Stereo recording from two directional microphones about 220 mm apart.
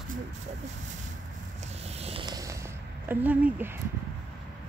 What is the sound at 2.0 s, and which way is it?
Purr, 25° right (ahead or behind).